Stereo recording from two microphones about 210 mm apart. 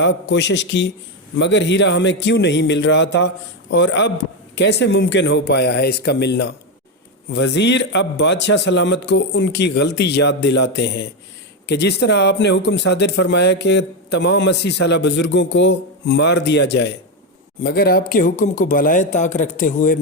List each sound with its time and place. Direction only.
0.0 s a man's voice: 55° left (ahead or behind); by 20.0 s 40° left (ahead or behind)